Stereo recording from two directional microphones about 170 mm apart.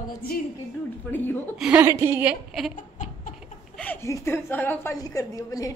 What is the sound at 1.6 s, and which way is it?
A woman's voice, 10° right (ahead or behind).